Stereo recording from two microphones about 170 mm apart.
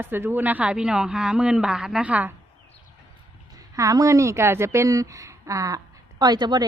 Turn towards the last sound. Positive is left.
turn(degrees=-25)  # may be behind; listen again after turning